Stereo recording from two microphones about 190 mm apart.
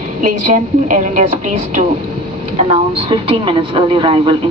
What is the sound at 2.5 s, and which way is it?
A woman's voice, 30° right (ahead or behind).